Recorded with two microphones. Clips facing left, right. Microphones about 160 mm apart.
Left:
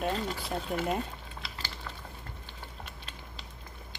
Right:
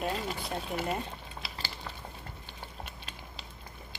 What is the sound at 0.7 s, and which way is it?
Speech, centre (ahead or behind).